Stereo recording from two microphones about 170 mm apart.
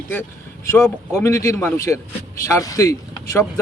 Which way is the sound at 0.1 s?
15° left (ahead or behind).